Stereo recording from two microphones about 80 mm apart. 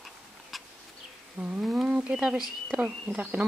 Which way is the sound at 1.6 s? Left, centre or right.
Centre.